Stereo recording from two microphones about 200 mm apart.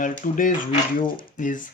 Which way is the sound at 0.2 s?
40° left (ahead or behind).